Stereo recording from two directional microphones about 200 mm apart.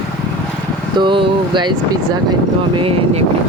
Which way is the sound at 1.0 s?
25° right (ahead or behind).